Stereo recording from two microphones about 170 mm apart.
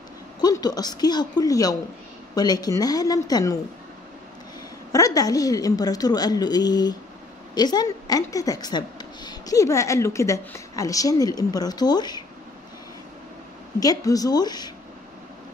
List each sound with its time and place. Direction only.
0.4 s a woman's voice: 20° left (ahead or behind)
4.9 s a woman's voice: 20° left (ahead or behind)
13.7 s a woman's voice: 20° left (ahead or behind)